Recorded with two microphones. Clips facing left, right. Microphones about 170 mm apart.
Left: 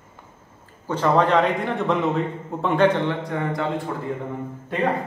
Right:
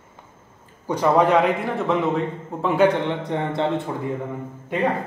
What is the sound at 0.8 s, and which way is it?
A man's voice, 10° right (ahead or behind).